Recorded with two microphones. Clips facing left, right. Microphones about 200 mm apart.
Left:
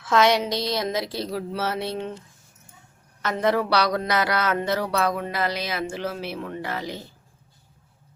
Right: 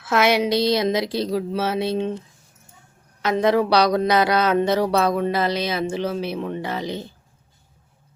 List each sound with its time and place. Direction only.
0.0 s a woman's voice: 10° right (ahead or behind)
3.2 s speech: 15° right (ahead or behind)